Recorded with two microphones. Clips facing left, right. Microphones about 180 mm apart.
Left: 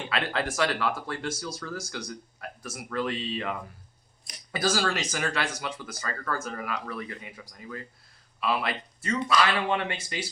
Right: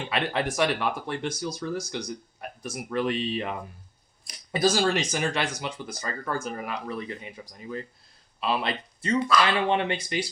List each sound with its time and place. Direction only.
0.1 s speech: 20° right (ahead or behind)